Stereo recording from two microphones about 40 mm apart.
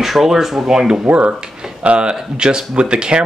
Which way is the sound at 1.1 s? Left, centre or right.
Right.